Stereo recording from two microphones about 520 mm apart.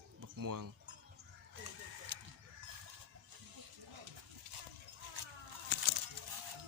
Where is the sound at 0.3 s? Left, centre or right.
Right.